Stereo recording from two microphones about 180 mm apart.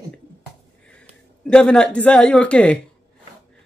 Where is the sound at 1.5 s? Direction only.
5° left (ahead or behind).